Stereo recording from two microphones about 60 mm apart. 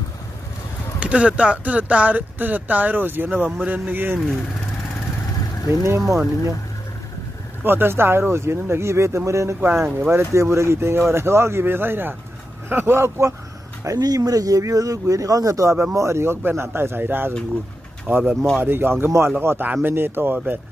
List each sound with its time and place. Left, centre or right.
0.9 s speech: centre
5.9 s speech: right
7.6 s speech: right
9.6 s speech: right
10.3 s speech: right
13.8 s speech: right
15.9 s speech: right
18.0 s speech: right
18.6 s speech: right
19.6 s speech: right